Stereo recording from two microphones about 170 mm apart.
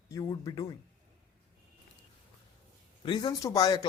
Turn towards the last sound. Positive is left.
turn(degrees=20)  # may be behind; listen again after turning